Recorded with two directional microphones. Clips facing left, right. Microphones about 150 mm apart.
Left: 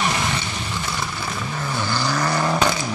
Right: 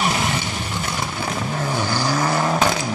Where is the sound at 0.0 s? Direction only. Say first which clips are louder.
Right 2 dB; 5° right (ahead or behind).